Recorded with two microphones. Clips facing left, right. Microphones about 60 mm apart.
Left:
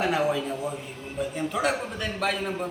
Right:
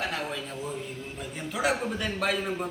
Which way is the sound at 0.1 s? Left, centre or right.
Centre.